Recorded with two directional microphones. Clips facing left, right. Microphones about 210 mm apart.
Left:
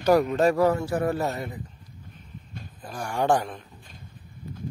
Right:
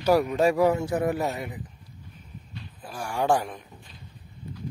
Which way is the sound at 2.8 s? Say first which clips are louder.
Left 1 dB; 5° right (ahead or behind).